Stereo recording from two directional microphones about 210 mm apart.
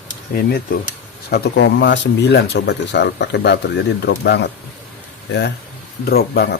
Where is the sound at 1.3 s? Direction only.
55° left (ahead or behind).